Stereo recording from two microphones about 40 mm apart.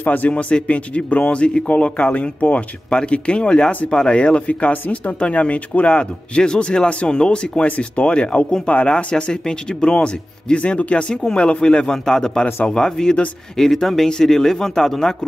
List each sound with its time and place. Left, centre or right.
0.0 s speech: left
0.3 s speech: left
7.6 s speech: left; by 15.1 s centre